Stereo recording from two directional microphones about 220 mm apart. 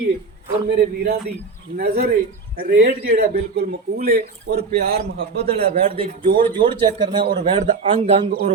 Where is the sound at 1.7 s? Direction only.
45° right (ahead or behind).